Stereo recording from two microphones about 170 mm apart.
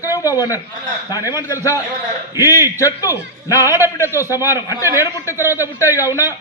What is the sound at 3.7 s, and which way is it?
Speech, 15° right (ahead or behind).